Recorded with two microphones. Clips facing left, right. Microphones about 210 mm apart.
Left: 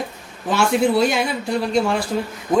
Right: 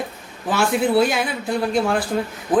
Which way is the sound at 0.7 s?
Centre (ahead or behind).